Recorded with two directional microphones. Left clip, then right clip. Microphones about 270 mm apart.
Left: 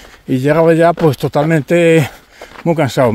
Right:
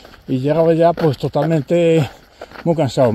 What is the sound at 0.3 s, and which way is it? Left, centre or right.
Speech, left.